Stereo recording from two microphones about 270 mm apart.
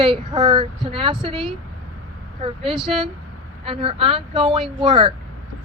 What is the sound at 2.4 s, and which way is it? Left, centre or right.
Speech, right.